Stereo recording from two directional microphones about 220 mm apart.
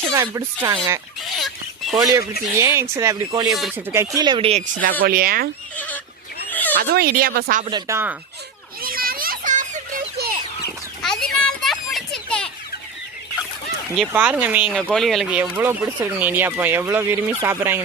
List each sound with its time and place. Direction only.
0.1 s speech: 15° right (ahead or behind)
1.2 s a sound: centre (ahead or behind)
2.0 s speech: 15° right (ahead or behind)
3.5 s speech: centre (ahead or behind)
3.9 s speech: 15° right (ahead or behind); by 5.5 s 40° right (ahead or behind)
5.7 s fowl: 5° left (ahead or behind)
6.5 s neigh: 10° left (ahead or behind)
6.7 s speech: 45° right (ahead or behind)
7.6 s speech: 20° right (ahead or behind)
8.8 s children playing: 40° right (ahead or behind)
11.0 s children playing: centre (ahead or behind)
14.1 s speech: 5° right (ahead or behind)